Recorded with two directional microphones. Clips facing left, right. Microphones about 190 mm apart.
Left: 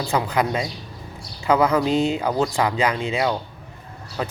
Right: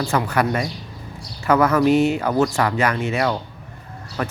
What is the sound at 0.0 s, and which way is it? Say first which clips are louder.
Speech: right 1 dB; 15° left (ahead or behind).